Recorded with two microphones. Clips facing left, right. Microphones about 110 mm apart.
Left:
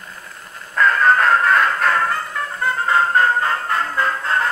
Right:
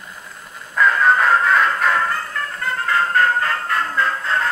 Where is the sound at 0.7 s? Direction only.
5° right (ahead or behind).